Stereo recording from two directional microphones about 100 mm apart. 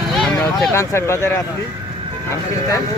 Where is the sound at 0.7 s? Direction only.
25° left (ahead or behind).